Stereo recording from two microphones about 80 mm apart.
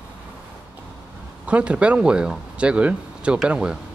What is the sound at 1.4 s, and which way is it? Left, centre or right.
Speech, centre.